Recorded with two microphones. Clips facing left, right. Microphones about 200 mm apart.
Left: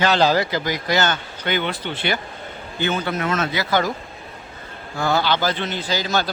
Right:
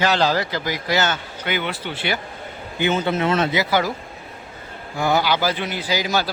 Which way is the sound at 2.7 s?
20° right (ahead or behind).